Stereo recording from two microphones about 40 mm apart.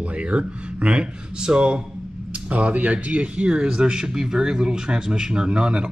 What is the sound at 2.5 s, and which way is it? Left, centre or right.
Speech, right.